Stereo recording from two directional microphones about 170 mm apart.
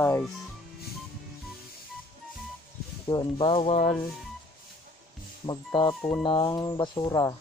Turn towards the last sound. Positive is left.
turn(degrees=20)  # may be behind; listen again after turning